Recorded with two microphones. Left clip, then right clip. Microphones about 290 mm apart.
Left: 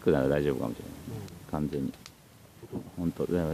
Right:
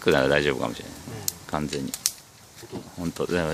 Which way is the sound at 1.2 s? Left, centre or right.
Centre.